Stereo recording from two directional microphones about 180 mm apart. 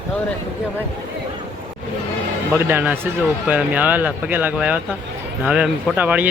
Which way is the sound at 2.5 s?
10° right (ahead or behind).